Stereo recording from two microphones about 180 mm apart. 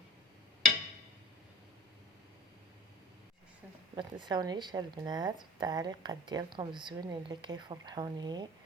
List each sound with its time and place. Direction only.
3.9 s a woman's voice: 25° right (ahead or behind)